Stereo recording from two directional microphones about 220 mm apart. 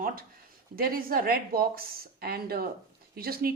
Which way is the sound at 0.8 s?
40° right (ahead or behind).